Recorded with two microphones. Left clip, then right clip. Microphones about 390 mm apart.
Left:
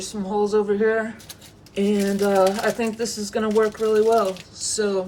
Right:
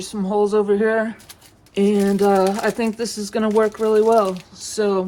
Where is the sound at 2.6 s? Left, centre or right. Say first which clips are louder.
Right 2 dB; centre.